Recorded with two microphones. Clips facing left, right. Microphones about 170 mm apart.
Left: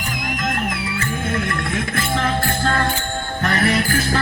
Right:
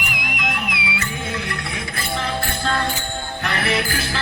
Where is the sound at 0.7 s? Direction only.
75° right (ahead or behind).